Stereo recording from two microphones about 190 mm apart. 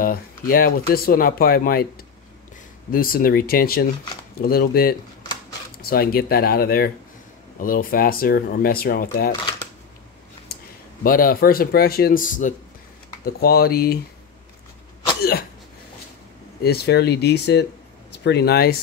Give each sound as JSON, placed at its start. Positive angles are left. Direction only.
{"t": 0.0, "sound": "speech", "side_deg": 50}
{"t": 2.9, "sound": "speech", "side_deg": 50}
{"t": 11.1, "sound": "speech", "side_deg": 50}
{"t": 13.2, "sound": "speech", "side_deg": 55}
{"t": 16.6, "sound": "speech", "side_deg": 60}